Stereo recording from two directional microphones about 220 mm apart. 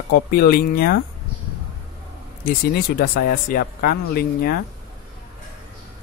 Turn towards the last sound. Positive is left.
turn(degrees=45)  # may be behind; listen again after turning